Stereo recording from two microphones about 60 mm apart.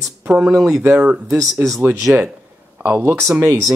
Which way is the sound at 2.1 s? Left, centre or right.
Right.